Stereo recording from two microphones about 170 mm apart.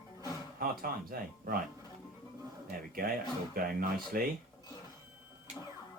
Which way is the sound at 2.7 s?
55° right (ahead or behind).